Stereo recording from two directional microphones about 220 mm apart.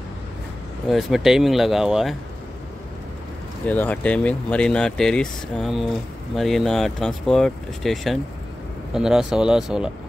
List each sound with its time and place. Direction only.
0.8 s speech: centre (ahead or behind)
3.6 s speech: 5° left (ahead or behind)